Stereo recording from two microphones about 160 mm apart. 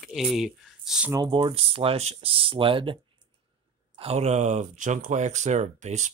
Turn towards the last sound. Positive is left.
turn(degrees=-45)  # may be behind; listen again after turning